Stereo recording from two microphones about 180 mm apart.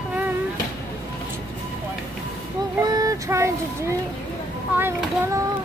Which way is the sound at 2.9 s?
20° right (ahead or behind).